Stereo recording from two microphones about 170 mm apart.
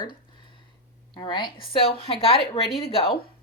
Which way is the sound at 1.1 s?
25° left (ahead or behind).